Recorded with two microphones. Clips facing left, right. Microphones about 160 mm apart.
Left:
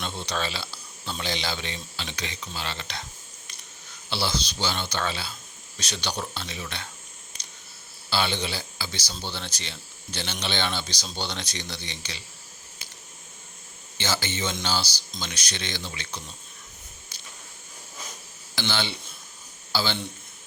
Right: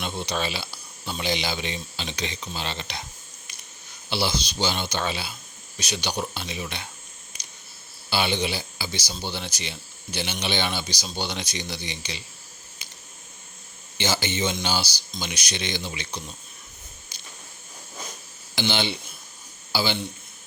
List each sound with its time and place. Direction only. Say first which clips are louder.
0.0 s speech: right 2 dB; 15° right (ahead or behind)
8.1 s speech: right 2 dB; 15° right (ahead or behind)
14.0 s speech: right 3 dB; 15° right (ahead or behind)
17.1 s a sound: right 1 dB; 15° right (ahead or behind)
18.5 s speech: right 3 dB; 15° right (ahead or behind)